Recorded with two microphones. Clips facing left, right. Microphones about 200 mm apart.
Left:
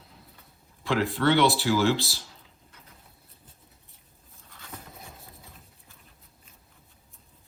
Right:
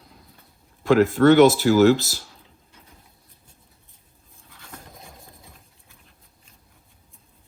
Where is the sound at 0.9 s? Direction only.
45° right (ahead or behind).